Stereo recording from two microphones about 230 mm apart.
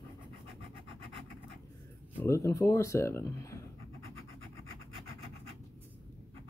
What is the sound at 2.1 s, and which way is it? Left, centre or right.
Speech, centre.